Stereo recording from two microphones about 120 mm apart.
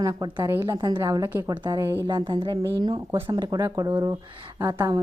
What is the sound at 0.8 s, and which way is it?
Speech, 35° right (ahead or behind).